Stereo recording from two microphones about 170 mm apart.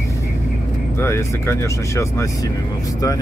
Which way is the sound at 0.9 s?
15° left (ahead or behind).